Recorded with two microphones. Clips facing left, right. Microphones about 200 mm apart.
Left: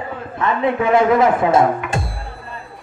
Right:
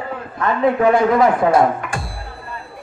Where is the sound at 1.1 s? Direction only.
25° left (ahead or behind).